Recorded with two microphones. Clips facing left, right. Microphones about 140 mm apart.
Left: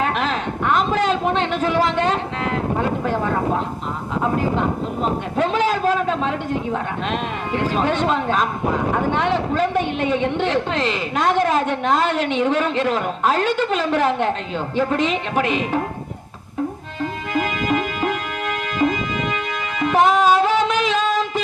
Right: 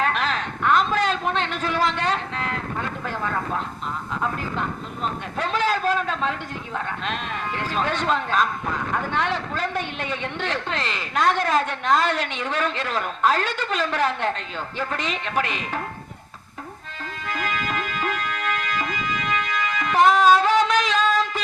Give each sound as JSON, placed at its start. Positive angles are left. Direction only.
{"t": 0.0, "sound": "a sound", "side_deg": 15}
{"t": 2.8, "sound": "vehicle", "side_deg": 20}
{"t": 4.2, "sound": "speech", "side_deg": 20}
{"t": 5.4, "sound": "a sound", "side_deg": 15}
{"t": 7.1, "sound": "speech", "side_deg": 15}
{"t": 17.0, "sound": "music", "side_deg": 15}